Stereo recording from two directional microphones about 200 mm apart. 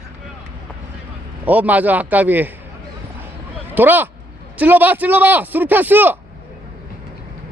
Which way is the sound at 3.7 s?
10° right (ahead or behind).